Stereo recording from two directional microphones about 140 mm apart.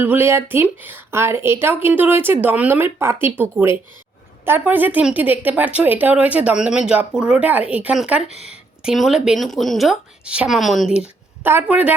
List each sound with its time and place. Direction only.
0.0 s speech: 15° right (ahead or behind)